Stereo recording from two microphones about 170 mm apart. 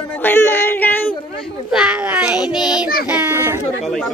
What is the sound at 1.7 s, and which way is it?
A child's voice, 5° right (ahead or behind).